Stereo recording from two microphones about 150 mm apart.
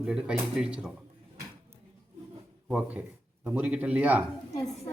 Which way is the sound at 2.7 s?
5° right (ahead or behind).